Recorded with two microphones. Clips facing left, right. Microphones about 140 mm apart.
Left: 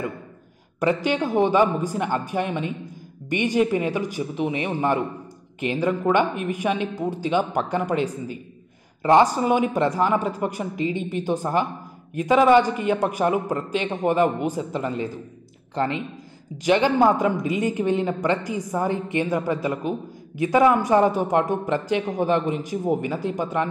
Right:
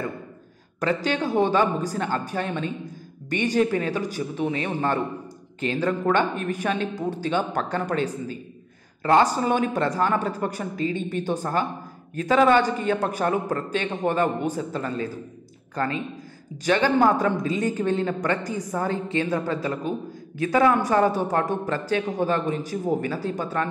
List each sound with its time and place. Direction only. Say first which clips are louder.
0.7 s a woman's voice: left 2 dB; 15° left (ahead or behind)